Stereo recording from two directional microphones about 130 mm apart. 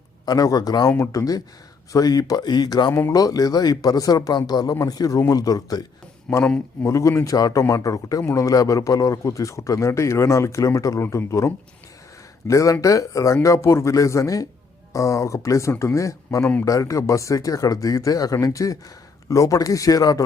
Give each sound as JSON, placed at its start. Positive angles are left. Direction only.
{"t": 0.3, "sound": "a man's voice", "side_deg": 30}
{"t": 6.3, "sound": "speech", "side_deg": 5}
{"t": 6.8, "sound": "a man's voice", "side_deg": 25}